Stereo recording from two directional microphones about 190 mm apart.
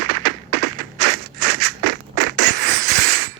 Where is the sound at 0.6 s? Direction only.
45° right (ahead or behind).